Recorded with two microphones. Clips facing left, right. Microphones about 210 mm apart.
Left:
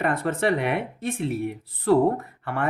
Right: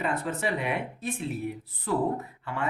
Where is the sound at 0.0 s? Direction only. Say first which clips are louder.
Left 5 dB; 90° left.